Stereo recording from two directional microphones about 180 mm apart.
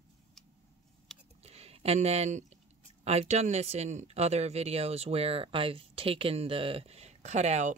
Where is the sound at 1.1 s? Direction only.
5° left (ahead or behind).